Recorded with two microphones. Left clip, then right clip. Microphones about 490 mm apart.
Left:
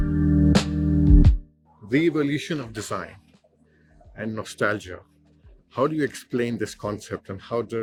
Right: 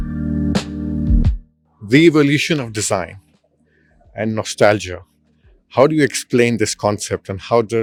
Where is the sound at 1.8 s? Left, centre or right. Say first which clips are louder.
Right 10 dB; right.